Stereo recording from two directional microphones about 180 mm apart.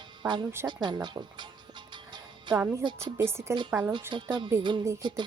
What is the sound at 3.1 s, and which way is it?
Speech, 15° right (ahead or behind).